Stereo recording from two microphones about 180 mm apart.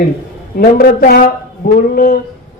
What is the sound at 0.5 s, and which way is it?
A woman's voice, 50° left (ahead or behind).